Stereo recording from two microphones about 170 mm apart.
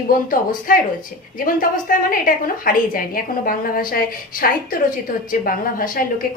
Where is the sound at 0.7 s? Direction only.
55° left (ahead or behind).